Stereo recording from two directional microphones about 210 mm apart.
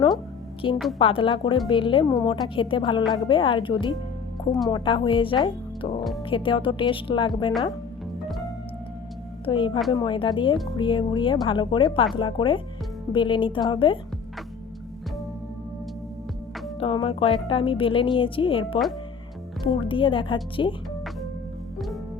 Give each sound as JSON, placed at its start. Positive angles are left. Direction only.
{"t": 0.6, "sound": "a woman's voice", "side_deg": 25}
{"t": 9.5, "sound": "a woman's voice", "side_deg": 25}
{"t": 16.8, "sound": "a woman's voice", "side_deg": 25}